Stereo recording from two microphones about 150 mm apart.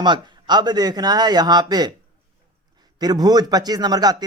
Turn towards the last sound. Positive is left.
turn(degrees=-25)  # may be behind; listen again after turning